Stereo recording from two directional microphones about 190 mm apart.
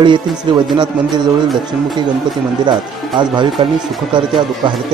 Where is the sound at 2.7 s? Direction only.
25° right (ahead or behind).